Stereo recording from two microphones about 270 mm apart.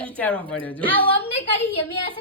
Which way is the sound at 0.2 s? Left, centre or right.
Centre.